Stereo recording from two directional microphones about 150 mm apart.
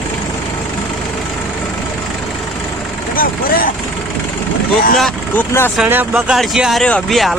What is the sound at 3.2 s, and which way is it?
Vehicle, 70° left (ahead or behind).